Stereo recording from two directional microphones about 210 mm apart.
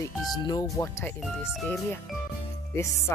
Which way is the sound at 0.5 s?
15° left (ahead or behind).